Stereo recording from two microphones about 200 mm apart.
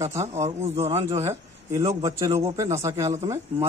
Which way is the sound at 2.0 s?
15° right (ahead or behind).